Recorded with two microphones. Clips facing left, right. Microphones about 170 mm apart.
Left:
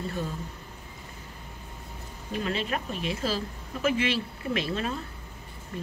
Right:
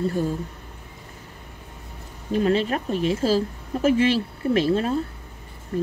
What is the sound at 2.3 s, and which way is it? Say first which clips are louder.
Speech: right 9 dB; 40° right (ahead or behind).